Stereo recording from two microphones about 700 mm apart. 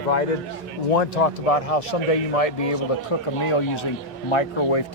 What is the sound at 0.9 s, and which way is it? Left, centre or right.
A man's voice, left.